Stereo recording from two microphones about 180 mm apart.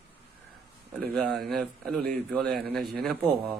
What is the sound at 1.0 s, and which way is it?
A man's voice, centre (ahead or behind).